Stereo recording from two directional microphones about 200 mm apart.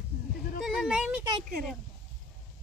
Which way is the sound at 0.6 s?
Centre (ahead or behind).